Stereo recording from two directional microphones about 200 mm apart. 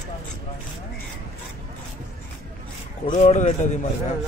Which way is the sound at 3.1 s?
35° left (ahead or behind).